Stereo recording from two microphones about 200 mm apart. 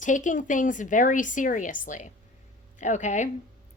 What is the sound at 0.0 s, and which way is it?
A woman's voice, 40° left (ahead or behind).